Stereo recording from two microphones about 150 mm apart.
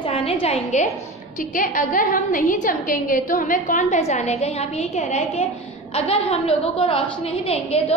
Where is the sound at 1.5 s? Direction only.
65° left (ahead or behind).